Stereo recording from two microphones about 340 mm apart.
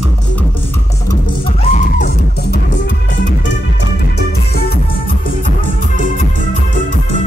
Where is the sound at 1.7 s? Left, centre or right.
Left.